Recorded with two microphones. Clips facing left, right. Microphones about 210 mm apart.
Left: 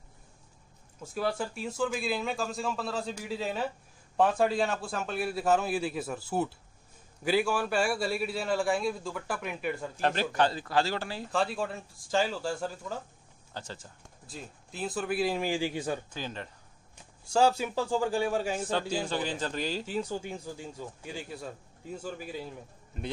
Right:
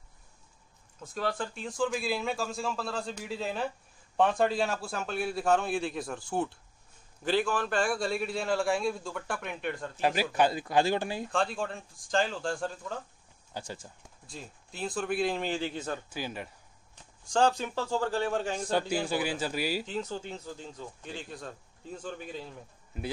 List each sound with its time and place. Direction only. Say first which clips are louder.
1.0 s a man's voice: left 2 dB; 10° left (ahead or behind)
10.0 s speech: right 1 dB; 10° right (ahead or behind)
11.3 s a man's voice: left 2 dB; 5° left (ahead or behind)
13.5 s speech: right 2 dB; 10° right (ahead or behind)
14.2 s a man's voice: left 1 dB; 5° left (ahead or behind)
16.1 s speech: right 1 dB; 10° right (ahead or behind)
17.3 s speech: left 1 dB; 5° left (ahead or behind)
18.7 s speech: right 2 dB; 10° right (ahead or behind)
19.9 s speech: left 2 dB; 10° left (ahead or behind)